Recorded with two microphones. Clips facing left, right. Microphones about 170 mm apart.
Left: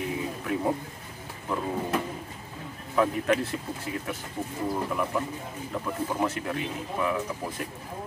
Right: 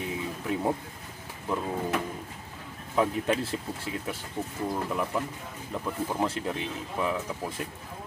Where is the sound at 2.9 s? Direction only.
30° right (ahead or behind).